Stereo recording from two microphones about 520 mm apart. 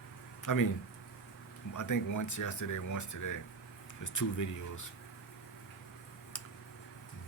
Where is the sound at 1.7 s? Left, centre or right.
Left.